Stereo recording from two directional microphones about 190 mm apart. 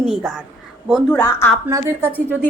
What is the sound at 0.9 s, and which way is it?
Speech, 10° left (ahead or behind).